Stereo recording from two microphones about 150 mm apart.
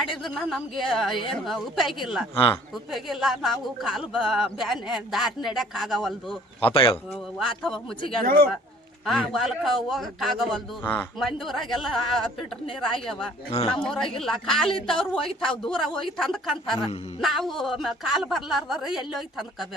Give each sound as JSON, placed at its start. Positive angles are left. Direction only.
{"t": 0.0, "sound": "speech", "side_deg": 0}
{"t": 6.6, "sound": "speech", "side_deg": 40}
{"t": 7.1, "sound": "speech", "side_deg": 0}
{"t": 8.2, "sound": "speech", "side_deg": -90}
{"t": 9.0, "sound": "speech", "side_deg": 0}